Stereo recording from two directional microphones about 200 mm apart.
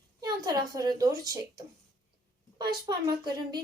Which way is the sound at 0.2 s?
20° right (ahead or behind).